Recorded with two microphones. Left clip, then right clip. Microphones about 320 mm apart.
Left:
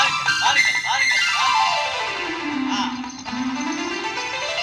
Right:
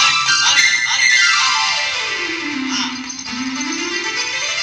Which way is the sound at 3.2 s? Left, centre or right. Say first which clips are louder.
Right 2 dB; left.